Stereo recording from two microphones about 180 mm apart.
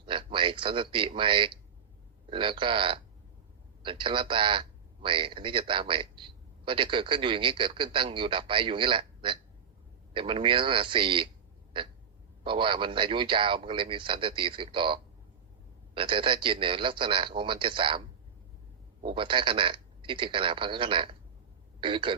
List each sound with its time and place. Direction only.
0.0 s a man's voice: 30° right (ahead or behind)
11.7 s a sound: 30° right (ahead or behind)
12.5 s a man's voice: 25° right (ahead or behind)
19.0 s a man's voice: 30° right (ahead or behind)